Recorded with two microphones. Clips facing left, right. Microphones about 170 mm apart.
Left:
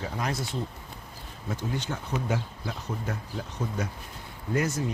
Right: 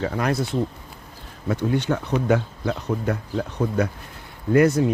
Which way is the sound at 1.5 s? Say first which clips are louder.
Right 10 dB; 65° right (ahead or behind).